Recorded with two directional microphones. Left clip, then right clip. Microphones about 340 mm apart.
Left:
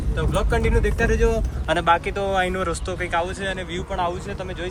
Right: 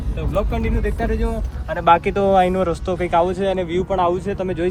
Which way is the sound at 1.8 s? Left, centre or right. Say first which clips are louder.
Right 7 dB; centre.